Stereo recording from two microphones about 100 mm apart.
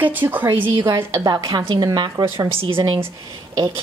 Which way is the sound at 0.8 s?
40° right (ahead or behind).